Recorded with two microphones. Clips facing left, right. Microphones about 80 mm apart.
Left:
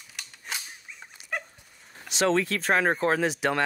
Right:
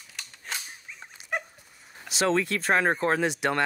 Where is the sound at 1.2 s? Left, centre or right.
Right.